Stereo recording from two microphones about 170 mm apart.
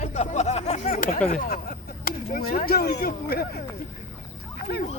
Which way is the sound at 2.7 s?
65° left (ahead or behind).